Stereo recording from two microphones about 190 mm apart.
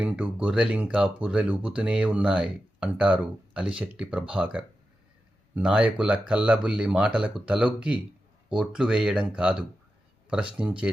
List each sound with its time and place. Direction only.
0.0 s speech: 5° right (ahead or behind)